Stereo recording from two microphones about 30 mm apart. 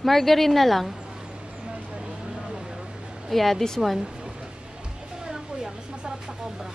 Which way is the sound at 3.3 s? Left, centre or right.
Centre.